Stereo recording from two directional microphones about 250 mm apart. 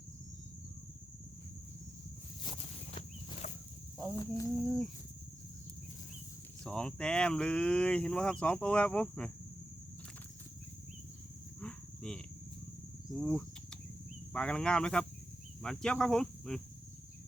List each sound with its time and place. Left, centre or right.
2.4 s a sound: left
3.9 s speech: centre
6.7 s speech: centre
11.6 s livestock: centre
13.1 s cricket: centre
14.3 s speech: centre